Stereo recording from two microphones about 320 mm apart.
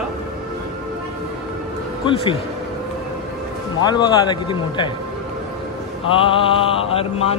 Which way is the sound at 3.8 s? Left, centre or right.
Centre.